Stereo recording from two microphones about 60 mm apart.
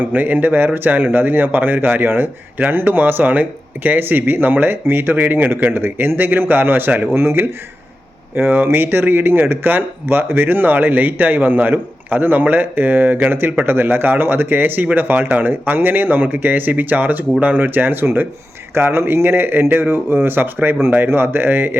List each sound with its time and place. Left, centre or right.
0.0 s speech: right